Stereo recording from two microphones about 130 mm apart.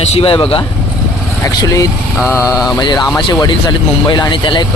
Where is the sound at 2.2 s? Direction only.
20° left (ahead or behind).